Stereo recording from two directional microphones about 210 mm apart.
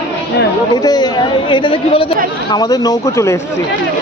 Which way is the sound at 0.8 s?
15° left (ahead or behind).